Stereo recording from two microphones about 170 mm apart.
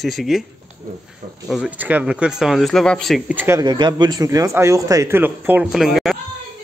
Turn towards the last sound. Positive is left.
turn(degrees=0)  # may be behind; listen again after turning